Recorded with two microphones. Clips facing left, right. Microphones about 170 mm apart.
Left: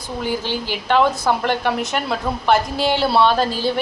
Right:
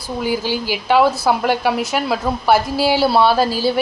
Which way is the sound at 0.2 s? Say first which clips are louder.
Right 3 dB; 10° right (ahead or behind).